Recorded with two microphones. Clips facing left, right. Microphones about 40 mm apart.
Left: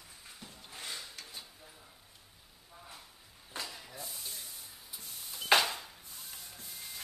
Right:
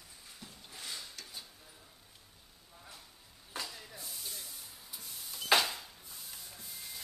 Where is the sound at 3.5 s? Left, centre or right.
Centre.